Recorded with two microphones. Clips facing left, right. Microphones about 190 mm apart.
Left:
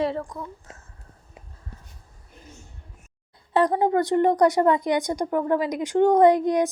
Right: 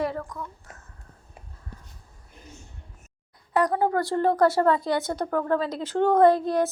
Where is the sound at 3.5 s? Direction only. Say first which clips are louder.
Left 3 dB; 25° left (ahead or behind).